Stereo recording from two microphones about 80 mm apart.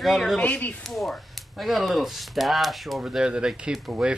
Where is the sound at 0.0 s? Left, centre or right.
Centre.